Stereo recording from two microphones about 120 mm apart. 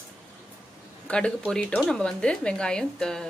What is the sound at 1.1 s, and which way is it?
A woman's voice, 5° left (ahead or behind).